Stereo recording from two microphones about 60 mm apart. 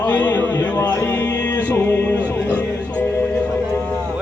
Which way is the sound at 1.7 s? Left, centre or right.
Left.